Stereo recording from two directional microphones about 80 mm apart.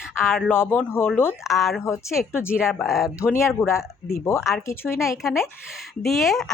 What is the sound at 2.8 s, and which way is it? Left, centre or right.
Speech, centre.